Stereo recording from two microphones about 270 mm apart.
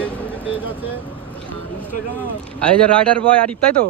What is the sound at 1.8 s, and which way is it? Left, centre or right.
Speech, centre.